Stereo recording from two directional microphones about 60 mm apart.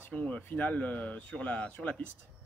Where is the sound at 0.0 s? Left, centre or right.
Left.